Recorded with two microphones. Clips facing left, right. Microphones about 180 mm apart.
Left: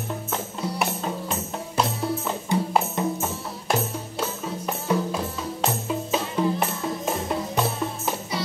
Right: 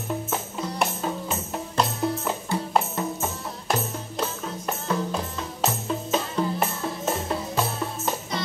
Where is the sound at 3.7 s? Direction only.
5° left (ahead or behind).